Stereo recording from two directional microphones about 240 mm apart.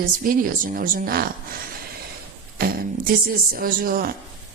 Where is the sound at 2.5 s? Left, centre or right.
Right.